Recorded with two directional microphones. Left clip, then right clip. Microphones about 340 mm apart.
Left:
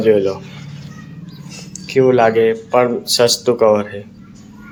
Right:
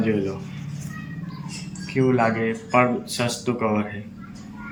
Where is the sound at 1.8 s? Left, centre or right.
Left.